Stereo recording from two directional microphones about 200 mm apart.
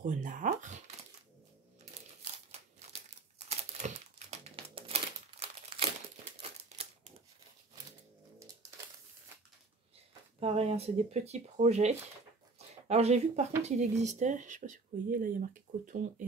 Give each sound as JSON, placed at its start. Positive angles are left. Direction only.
{"t": 0.0, "sound": "speech", "side_deg": -40}
{"t": 2.3, "sound": "crumpling", "side_deg": -30}
{"t": 10.4, "sound": "speech", "side_deg": -30}
{"t": 12.5, "sound": "a sound", "side_deg": -30}
{"t": 13.6, "sound": "speech", "side_deg": -35}